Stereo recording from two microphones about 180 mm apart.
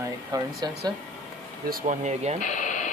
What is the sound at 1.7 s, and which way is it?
Speech, 50° right (ahead or behind).